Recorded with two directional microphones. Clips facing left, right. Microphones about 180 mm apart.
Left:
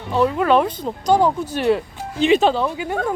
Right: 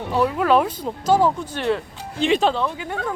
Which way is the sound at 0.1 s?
5° right (ahead or behind).